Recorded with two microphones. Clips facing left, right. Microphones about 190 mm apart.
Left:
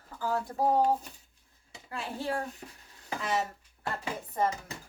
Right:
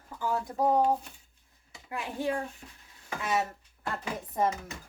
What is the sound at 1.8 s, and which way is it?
Speech, 15° right (ahead or behind).